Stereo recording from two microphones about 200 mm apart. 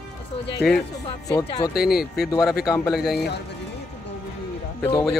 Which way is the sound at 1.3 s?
20° left (ahead or behind).